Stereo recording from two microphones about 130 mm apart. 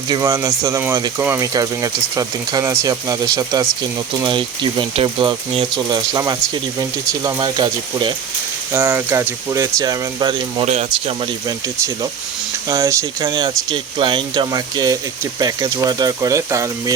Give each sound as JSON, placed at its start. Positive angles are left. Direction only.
{"t": 0.1, "sound": "speech", "side_deg": -25}
{"t": 4.3, "sound": "speech", "side_deg": -40}
{"t": 8.7, "sound": "speech", "side_deg": -10}
{"t": 10.7, "sound": "speech", "side_deg": -55}
{"t": 12.6, "sound": "speech", "side_deg": -25}